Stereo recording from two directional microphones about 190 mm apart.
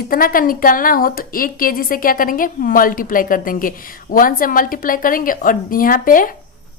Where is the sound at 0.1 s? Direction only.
50° left (ahead or behind).